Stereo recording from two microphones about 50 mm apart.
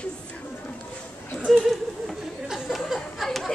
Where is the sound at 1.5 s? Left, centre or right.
Centre.